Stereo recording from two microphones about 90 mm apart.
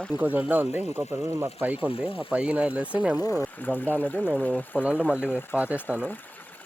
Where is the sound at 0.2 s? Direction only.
20° right (ahead or behind).